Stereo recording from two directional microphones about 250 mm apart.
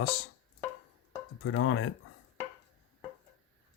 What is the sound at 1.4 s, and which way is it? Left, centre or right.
Dishes, left.